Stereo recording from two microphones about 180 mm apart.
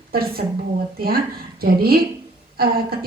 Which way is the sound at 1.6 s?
55° right (ahead or behind).